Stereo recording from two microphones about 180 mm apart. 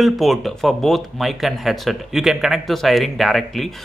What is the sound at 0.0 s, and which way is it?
Speech, centre (ahead or behind).